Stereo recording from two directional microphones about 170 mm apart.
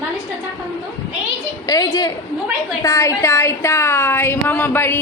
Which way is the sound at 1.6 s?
20° left (ahead or behind).